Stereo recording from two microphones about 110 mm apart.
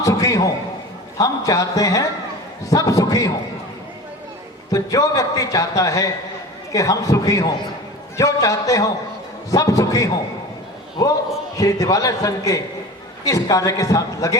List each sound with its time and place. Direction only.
0.0 s a sound: 30° left (ahead or behind)
1.2 s a man's voice: 30° left (ahead or behind)
4.7 s a man's voice: 30° left (ahead or behind)